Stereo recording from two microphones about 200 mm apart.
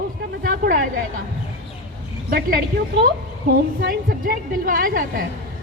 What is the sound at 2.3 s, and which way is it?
Speech, 50° right (ahead or behind).